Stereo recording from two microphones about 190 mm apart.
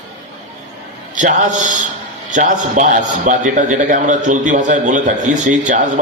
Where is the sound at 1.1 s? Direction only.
40° right (ahead or behind).